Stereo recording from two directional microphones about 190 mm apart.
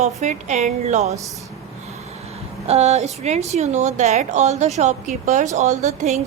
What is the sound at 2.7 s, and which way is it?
A woman's voice, 35° right (ahead or behind).